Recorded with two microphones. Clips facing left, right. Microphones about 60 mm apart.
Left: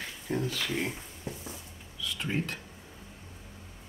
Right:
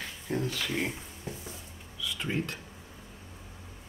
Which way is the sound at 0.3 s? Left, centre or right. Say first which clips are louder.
Even; centre.